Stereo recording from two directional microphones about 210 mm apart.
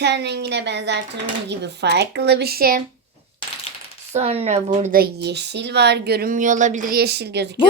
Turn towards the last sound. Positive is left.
turn(degrees=-55)  # may be behind; listen again after turning